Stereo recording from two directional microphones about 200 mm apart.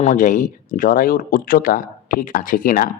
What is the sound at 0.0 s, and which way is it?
Speech, 40° left (ahead or behind).